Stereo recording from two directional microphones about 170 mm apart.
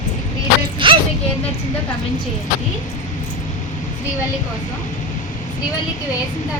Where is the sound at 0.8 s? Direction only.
30° right (ahead or behind).